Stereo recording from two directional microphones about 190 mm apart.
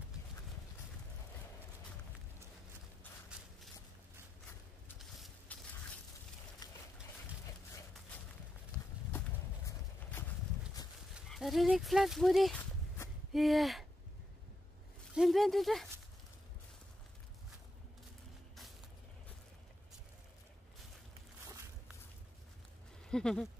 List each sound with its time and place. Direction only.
4.9 s vehicle: centre (ahead or behind)
6.6 s a sound: 20° left (ahead or behind)
9.7 s horse: 10° left (ahead or behind)
11.1 s speech: centre (ahead or behind)
15.1 s speech: centre (ahead or behind)
21.5 s walk: 15° right (ahead or behind)
23.0 s speech: 5° left (ahead or behind)